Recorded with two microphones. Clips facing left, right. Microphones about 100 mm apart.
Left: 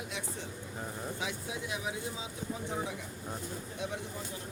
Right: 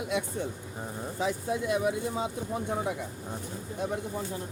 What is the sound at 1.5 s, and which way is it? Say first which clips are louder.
Speech: right 10 dB; 55° right (ahead or behind).